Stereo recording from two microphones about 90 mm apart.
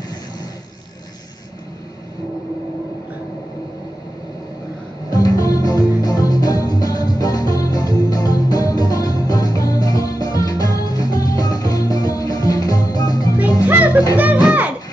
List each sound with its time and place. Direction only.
5.1 s music: 45° left (ahead or behind)
13.7 s music: 20° right (ahead or behind)